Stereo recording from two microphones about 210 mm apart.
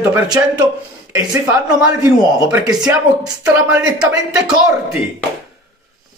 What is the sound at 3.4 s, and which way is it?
Speech, 5° right (ahead or behind).